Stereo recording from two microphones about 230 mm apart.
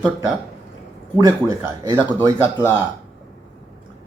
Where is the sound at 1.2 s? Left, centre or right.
Centre.